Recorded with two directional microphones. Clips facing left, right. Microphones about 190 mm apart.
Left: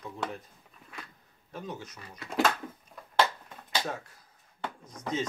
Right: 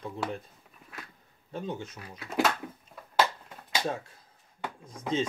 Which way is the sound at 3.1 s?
10° right (ahead or behind).